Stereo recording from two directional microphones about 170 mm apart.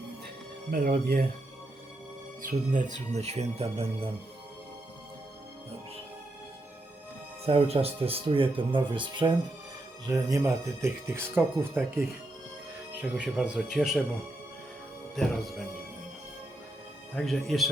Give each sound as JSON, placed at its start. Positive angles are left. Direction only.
{"t": 0.7, "sound": "speech", "side_deg": -60}
{"t": 2.4, "sound": "speech", "side_deg": -50}
{"t": 7.4, "sound": "speech", "side_deg": -35}
{"t": 15.1, "sound": "speech", "side_deg": 0}
{"t": 17.2, "sound": "speech", "side_deg": 0}